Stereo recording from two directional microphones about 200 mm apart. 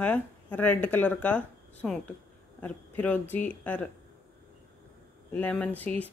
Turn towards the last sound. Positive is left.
turn(degrees=5)  # may be behind; listen again after turning